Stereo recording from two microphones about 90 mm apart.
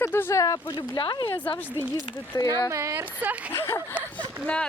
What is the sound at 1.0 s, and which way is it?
Speech, 60° left (ahead or behind).